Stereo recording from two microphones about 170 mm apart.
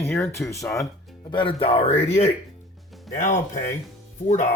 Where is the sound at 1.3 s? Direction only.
30° left (ahead or behind).